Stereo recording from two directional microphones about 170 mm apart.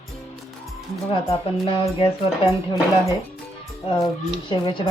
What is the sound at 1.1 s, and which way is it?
Speech, 35° left (ahead or behind).